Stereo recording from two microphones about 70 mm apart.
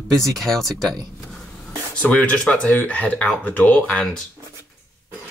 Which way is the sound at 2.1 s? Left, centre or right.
Centre.